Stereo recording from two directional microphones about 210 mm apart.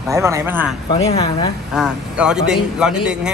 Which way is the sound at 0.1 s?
15° right (ahead or behind).